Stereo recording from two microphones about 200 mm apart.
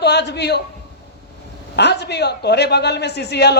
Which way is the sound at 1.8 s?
55° left (ahead or behind).